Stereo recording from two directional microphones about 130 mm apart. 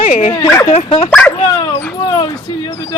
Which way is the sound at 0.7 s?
45° left (ahead or behind).